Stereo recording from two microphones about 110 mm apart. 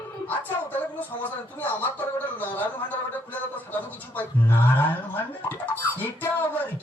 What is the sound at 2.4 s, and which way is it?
Speech, 15° left (ahead or behind).